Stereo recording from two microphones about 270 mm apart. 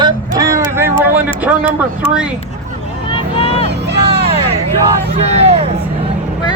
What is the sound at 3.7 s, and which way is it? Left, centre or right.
Vehicle, right.